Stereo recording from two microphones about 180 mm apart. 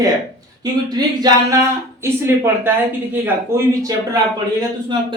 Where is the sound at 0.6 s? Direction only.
20° right (ahead or behind).